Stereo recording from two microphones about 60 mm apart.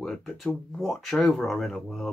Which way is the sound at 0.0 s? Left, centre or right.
Centre.